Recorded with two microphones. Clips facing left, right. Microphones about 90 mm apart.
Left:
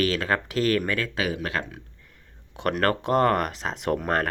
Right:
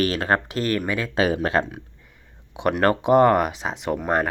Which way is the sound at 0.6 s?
5° right (ahead or behind).